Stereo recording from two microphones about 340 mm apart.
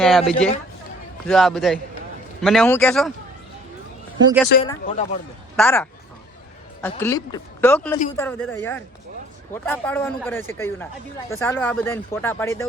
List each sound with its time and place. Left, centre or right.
0.0 s speech: centre
4.6 s speech: centre
5.5 s speech: centre